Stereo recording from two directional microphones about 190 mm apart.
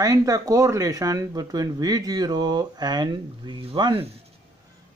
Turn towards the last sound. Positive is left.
turn(degrees=-25)  # may be behind; listen again after turning